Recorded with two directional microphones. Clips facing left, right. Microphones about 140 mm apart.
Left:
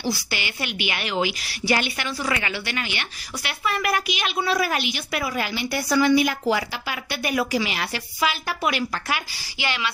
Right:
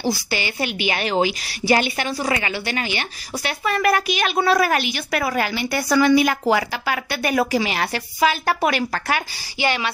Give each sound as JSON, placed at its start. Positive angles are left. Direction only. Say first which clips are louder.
{"t": 0.0, "sound": "a woman's voice", "louder": "right 4 dB", "side_deg": -40}
{"t": 6.4, "sound": "a woman's voice", "louder": "right 4 dB", "side_deg": -60}